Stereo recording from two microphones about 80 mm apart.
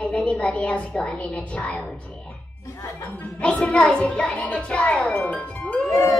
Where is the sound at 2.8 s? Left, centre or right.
Left.